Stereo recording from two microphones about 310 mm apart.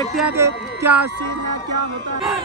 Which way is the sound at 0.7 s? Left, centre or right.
Centre.